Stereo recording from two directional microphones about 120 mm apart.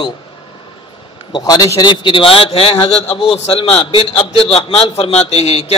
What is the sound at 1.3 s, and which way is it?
A man's voice, 30° left (ahead or behind).